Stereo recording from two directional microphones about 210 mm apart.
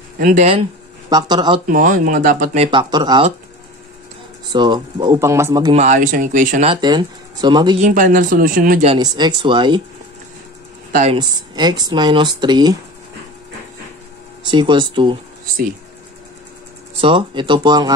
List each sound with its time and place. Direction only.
0.2 s speech: 35° right (ahead or behind)
1.1 s speech: 20° right (ahead or behind)
1.7 s speech: 40° right (ahead or behind); by 3.3 s 20° right (ahead or behind)
4.5 s speech: 20° right (ahead or behind)
5.8 s speech: 35° right (ahead or behind)
6.7 s speech: 20° right (ahead or behind)
7.8 s speech: 40° right (ahead or behind)
8.8 s speech: 20° right (ahead or behind)
11.1 s speech: 20° right (ahead or behind)
14.5 s speech: 20° right (ahead or behind)
17.0 s speech: 25° right (ahead or behind)